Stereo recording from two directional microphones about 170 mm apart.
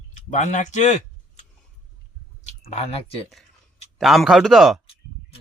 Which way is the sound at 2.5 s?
35° left (ahead or behind).